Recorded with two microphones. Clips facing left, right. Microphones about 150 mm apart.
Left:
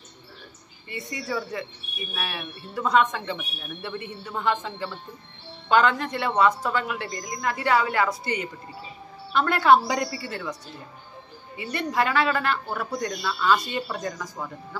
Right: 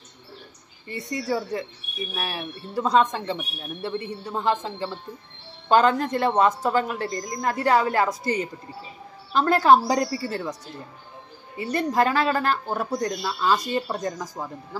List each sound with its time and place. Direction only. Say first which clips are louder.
0.8 s speech: right 5 dB; 35° right (ahead or behind)
11.5 s speech: right 3 dB; 40° right (ahead or behind)